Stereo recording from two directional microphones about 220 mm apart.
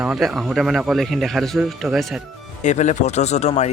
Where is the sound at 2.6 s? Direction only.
35° left (ahead or behind).